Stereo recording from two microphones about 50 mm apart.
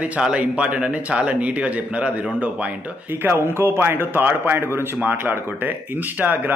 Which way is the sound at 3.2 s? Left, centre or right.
Right.